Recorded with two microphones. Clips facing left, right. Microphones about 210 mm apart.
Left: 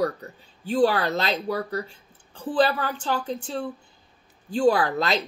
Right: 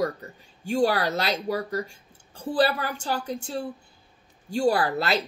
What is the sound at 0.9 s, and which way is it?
Speech, 40° right (ahead or behind).